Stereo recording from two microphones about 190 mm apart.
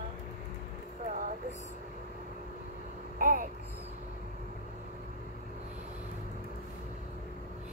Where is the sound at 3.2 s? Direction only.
45° right (ahead or behind).